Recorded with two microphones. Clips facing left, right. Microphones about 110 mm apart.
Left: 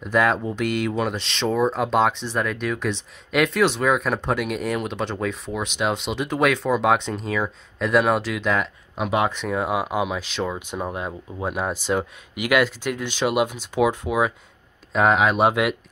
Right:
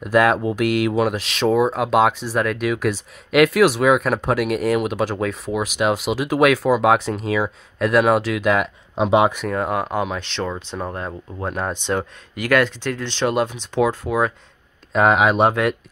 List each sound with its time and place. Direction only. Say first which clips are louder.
0.0 s speech: right 4 dB; 5° right (ahead or behind)
8.9 s speech: right 6 dB; 25° right (ahead or behind)
9.5 s speech: right 1 dB; 5° left (ahead or behind)
14.9 s speech: right 3 dB; centre (ahead or behind)
15.4 s speech: right 2 dB; 10° left (ahead or behind)